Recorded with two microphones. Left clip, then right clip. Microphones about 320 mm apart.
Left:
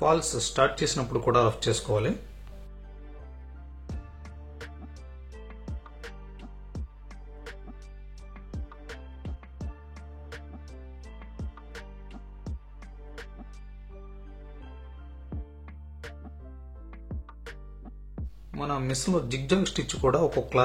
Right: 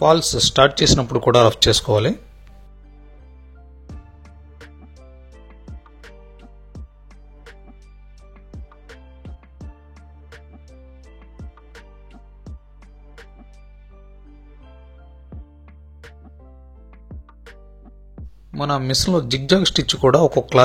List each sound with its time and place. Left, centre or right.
0.0 s speech: right
3.8 s music: centre
15.2 s music: centre
18.6 s speech: right